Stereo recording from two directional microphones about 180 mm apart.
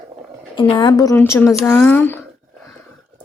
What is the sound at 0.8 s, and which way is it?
A woman's voice, 20° left (ahead or behind).